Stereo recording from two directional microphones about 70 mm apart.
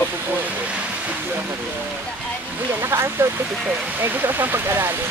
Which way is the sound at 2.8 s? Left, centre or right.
Right.